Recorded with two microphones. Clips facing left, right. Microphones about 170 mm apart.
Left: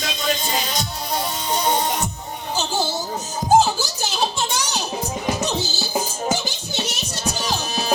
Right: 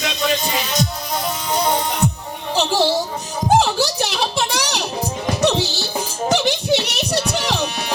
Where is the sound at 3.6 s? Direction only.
70° right (ahead or behind).